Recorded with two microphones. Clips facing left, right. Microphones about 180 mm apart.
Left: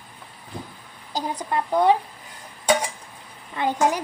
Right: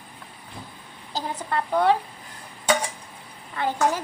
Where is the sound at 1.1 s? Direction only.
15° left (ahead or behind).